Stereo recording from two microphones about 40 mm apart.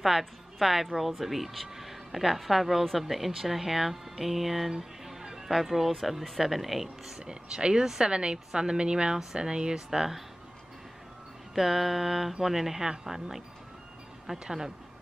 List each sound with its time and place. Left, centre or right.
0.2 s speech: centre
7.2 s speech: right
9.8 s speech: centre
11.5 s speech: centre
14.4 s speech: centre